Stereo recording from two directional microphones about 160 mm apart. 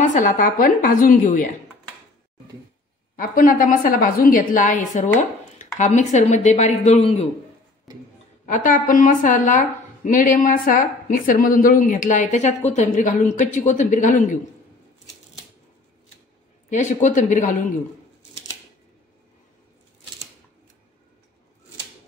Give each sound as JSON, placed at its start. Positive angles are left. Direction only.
{"t": 0.0, "sound": "a woman's voice", "side_deg": 50}
{"t": 3.2, "sound": "a woman's voice", "side_deg": 60}
{"t": 8.5, "sound": "a woman's voice", "side_deg": 55}
{"t": 16.7, "sound": "speech", "side_deg": 50}